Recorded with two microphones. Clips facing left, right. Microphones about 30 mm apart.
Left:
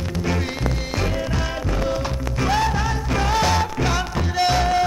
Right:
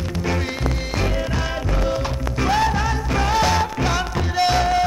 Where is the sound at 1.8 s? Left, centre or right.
Centre.